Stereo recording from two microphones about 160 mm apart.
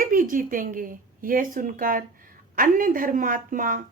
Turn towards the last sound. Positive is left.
turn(degrees=-60)  # may be behind; listen again after turning